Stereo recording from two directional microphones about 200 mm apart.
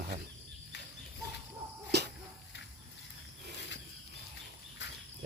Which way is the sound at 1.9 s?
55° right (ahead or behind).